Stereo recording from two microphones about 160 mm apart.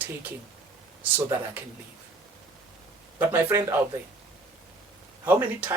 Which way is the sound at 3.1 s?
15° right (ahead or behind).